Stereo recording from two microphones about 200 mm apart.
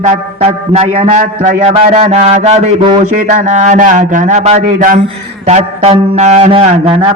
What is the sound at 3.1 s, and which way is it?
Music, 35° right (ahead or behind).